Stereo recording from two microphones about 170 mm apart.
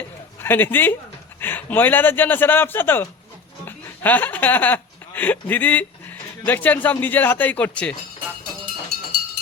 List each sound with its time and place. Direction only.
0.3 s a man's voice: 10° left (ahead or behind)